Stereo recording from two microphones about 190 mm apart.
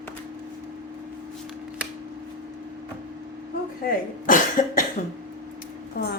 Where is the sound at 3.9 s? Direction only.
45° left (ahead or behind).